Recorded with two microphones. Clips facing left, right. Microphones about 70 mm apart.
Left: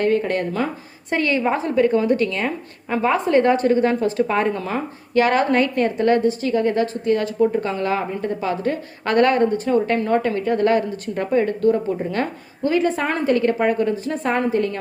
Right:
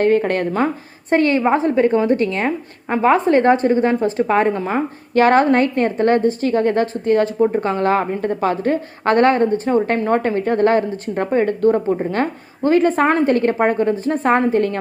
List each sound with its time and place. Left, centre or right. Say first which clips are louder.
0.0 s a woman's voice: right 4 dB; right